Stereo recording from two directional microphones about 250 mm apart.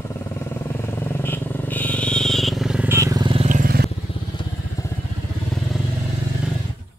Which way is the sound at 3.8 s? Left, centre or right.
Left.